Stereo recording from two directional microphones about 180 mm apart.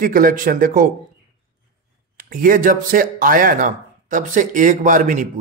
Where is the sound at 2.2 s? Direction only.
50° right (ahead or behind).